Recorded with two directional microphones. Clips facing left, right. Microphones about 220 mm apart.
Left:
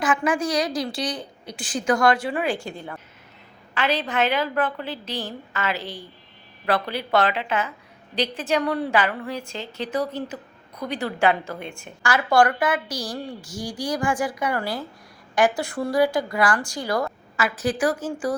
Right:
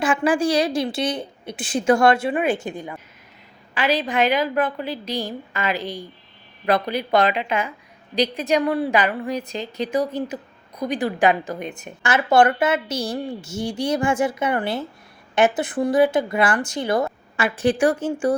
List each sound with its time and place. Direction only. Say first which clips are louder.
0.0 s a woman's voice: right 3 dB; 30° right (ahead or behind)